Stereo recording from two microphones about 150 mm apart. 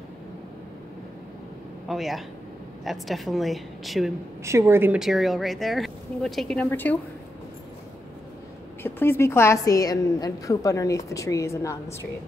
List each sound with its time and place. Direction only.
1.9 s a woman's voice: centre (ahead or behind)
4.5 s a woman's voice: 15° right (ahead or behind)
4.9 s a woman's voice: centre (ahead or behind)
8.8 s a woman's voice: 15° left (ahead or behind)